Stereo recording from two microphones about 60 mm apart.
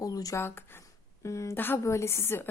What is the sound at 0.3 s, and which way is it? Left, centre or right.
Speech, left.